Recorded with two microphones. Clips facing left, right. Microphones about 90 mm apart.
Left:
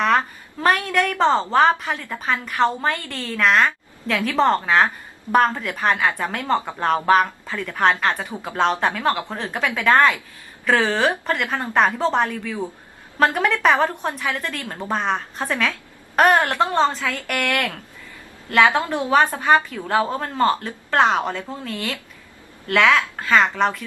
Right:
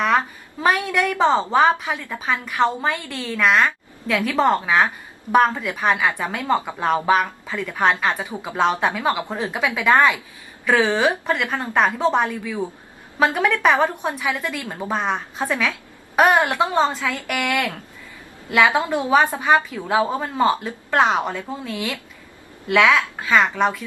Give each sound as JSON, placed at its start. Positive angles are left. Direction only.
{"t": 0.6, "sound": "a woman's voice", "side_deg": -10}